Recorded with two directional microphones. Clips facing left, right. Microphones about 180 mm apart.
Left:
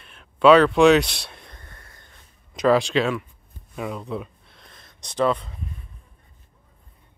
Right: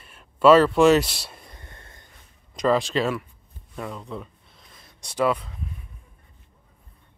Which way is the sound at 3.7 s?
10° left (ahead or behind).